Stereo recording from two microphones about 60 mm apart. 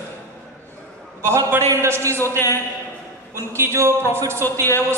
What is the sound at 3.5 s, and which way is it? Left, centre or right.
Speech, right.